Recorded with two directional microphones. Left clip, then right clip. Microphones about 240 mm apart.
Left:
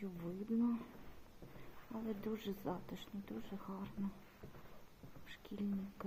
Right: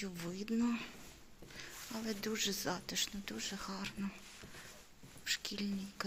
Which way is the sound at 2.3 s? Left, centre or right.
Centre.